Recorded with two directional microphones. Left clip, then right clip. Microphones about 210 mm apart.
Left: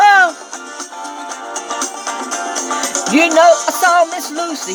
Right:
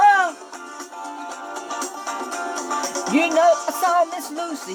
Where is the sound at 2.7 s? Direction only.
35° left (ahead or behind).